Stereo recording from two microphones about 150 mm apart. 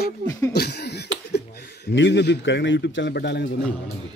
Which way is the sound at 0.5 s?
90° left.